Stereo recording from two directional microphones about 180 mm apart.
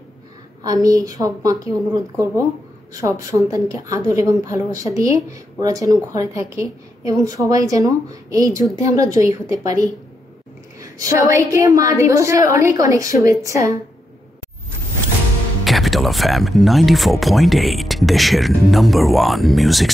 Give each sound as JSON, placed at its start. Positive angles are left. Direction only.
{"t": 0.8, "sound": "a woman's voice", "side_deg": -20}
{"t": 11.0, "sound": "a woman's voice", "side_deg": -15}
{"t": 15.6, "sound": "speech", "side_deg": 0}